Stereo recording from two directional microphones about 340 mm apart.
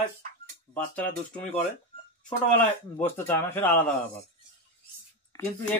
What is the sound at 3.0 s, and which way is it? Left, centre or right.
Speech, centre.